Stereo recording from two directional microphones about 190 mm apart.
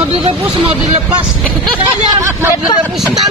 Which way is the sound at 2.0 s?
15° right (ahead or behind).